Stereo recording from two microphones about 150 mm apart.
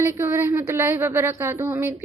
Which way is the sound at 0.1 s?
15° right (ahead or behind).